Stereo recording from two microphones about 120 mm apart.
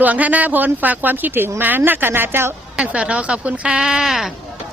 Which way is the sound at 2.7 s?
10° right (ahead or behind).